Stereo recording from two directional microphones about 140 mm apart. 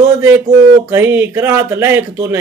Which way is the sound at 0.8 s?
15° right (ahead or behind).